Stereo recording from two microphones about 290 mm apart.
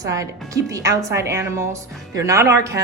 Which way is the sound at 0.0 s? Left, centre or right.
Centre.